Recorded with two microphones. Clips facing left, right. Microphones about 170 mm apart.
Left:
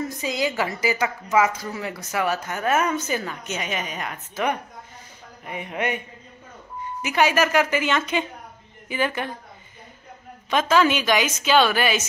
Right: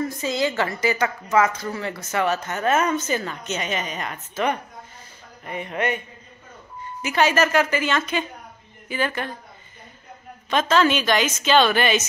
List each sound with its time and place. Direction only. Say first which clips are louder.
0.0 s a woman's voice: right 2 dB; 15° left (ahead or behind)
10.5 s a woman's voice: even; 10° left (ahead or behind)